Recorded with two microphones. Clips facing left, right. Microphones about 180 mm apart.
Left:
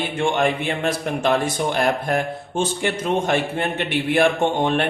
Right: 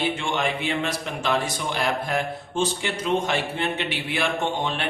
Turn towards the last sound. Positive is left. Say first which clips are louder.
# left 7 dB
turn(degrees=50)  # may be behind; listen again after turning